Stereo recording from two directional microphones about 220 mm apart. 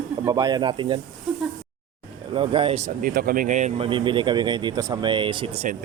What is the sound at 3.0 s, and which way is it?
Speech, 40° right (ahead or behind).